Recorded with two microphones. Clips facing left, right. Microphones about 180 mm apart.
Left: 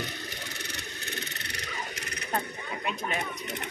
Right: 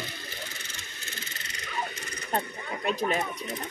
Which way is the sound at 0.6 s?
70° left (ahead or behind).